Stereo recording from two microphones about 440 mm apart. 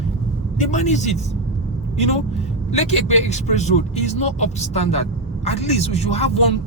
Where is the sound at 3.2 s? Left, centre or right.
Centre.